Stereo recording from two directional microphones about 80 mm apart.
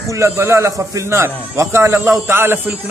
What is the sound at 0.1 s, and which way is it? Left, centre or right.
A man's voice, right.